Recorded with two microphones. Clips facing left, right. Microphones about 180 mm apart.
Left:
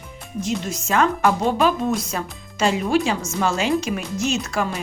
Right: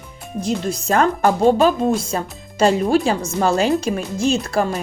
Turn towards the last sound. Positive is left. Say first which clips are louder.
# right 5 dB
turn(degrees=-35)  # may be behind; listen again after turning